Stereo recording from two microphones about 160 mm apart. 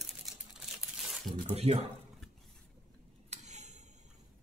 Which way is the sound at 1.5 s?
40° right (ahead or behind).